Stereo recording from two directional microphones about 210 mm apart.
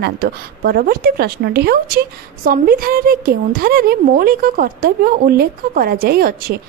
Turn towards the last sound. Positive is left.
turn(degrees=-45)  # may be behind; listen again after turning